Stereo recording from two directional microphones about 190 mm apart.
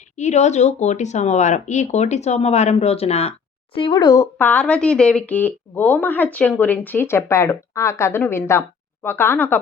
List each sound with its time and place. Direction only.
0.2 s speech: 35° left (ahead or behind); by 9.6 s 10° left (ahead or behind)